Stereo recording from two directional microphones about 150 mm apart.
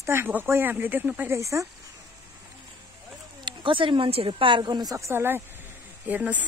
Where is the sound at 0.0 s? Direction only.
15° right (ahead or behind).